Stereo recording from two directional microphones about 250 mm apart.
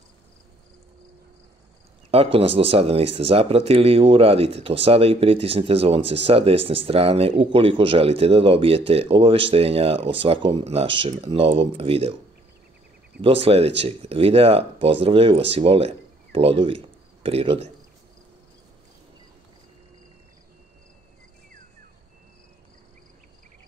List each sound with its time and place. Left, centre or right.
2.0 s speech: right
13.2 s speech: right